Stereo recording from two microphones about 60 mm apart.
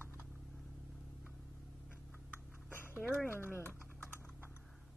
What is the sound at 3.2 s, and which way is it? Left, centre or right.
Speech, left.